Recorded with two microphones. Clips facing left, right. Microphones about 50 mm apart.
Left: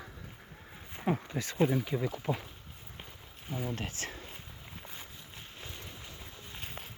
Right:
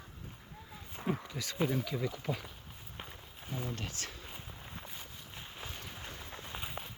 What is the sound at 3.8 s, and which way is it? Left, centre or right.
Speech, left.